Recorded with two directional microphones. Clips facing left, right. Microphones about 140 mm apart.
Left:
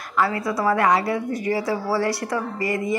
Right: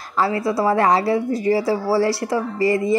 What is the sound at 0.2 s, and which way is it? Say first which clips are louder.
A woman's voice: right 3 dB; 30° right (ahead or behind).